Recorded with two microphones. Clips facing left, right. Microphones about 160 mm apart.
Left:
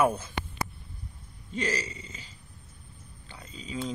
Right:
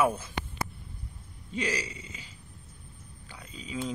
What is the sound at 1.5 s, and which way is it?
Speech, 10° right (ahead or behind).